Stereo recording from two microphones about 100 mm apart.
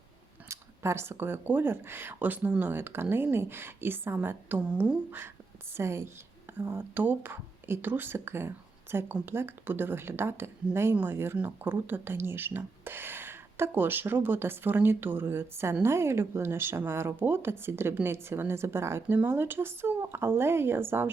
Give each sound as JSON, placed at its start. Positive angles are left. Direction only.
{"t": 0.4, "sound": "speech", "side_deg": -30}